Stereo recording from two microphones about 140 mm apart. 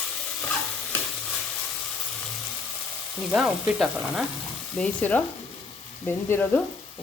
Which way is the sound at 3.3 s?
5° right (ahead or behind).